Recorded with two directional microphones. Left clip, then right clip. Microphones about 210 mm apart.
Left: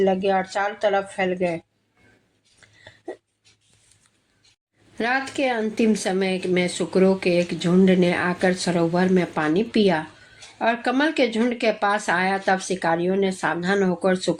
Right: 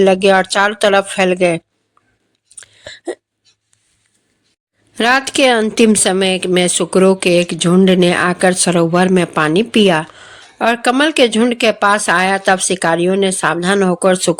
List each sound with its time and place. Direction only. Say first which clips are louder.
0.0 s a woman's voice: right 10 dB; 35° right (ahead or behind)
2.6 s hiccup: right 14 dB; 35° right (ahead or behind)
4.9 s a woman's voice: right 11 dB; 35° right (ahead or behind)